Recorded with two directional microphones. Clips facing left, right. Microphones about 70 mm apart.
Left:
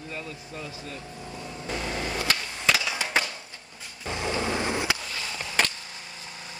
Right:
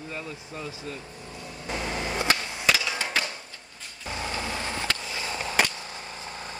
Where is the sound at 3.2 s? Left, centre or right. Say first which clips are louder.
Left 3 dB; left.